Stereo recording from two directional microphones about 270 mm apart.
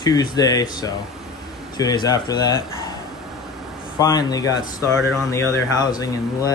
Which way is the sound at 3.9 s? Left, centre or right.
Centre.